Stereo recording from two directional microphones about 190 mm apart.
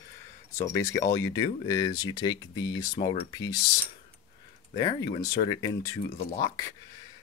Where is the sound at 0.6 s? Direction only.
15° left (ahead or behind).